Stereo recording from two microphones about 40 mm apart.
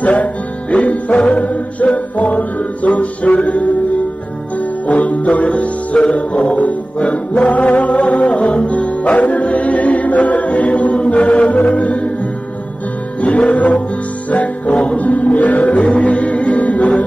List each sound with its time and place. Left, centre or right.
0.0 s music: left
13.2 s music: left